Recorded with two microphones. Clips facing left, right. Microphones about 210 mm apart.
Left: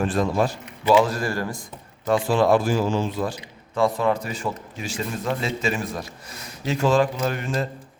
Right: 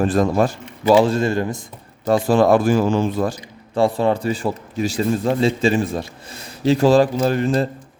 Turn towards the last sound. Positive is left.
turn(degrees=-35)  # may be behind; listen again after turning